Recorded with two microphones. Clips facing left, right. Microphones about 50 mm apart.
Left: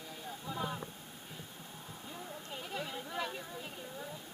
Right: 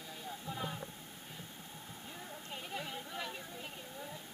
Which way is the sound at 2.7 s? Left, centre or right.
Centre.